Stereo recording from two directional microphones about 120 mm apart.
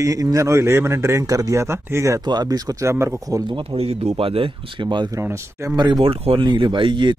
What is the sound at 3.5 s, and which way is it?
Speech, 50° right (ahead or behind).